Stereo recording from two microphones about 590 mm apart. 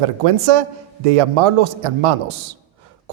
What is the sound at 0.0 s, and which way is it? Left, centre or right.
A man's voice, right.